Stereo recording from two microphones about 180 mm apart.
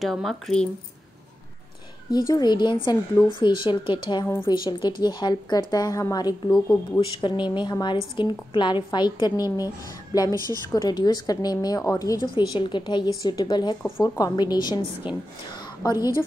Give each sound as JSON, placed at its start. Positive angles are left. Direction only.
{"t": 0.0, "sound": "speech", "side_deg": 0}
{"t": 2.0, "sound": "a woman's voice", "side_deg": 20}
{"t": 10.3, "sound": "a woman's voice", "side_deg": -20}
{"t": 10.7, "sound": "a woman's voice", "side_deg": 20}